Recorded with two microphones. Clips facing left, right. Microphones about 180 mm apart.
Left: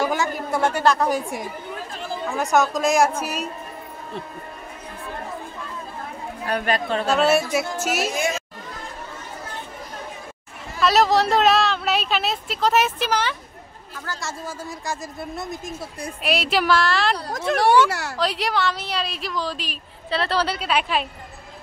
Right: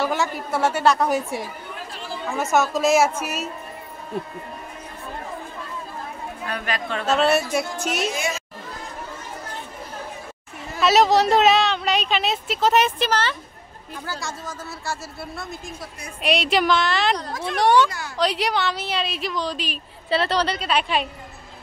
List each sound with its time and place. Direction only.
0.2 s a woman's voice: 5° right (ahead or behind)
2.3 s a woman's voice: centre (ahead or behind)
6.4 s speech: 40° left (ahead or behind)
7.2 s a woman's voice: centre (ahead or behind)
10.8 s a woman's voice: centre (ahead or behind); by 15.9 s 20° left (ahead or behind)
16.2 s a woman's voice: 5° left (ahead or behind)
17.8 s speech: 75° left (ahead or behind)
18.1 s a woman's voice: centre (ahead or behind)